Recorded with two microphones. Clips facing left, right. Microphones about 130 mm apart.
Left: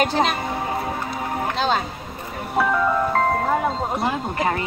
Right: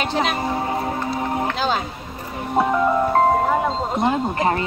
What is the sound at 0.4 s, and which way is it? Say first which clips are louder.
Music: right 3 dB; 25° right (ahead or behind).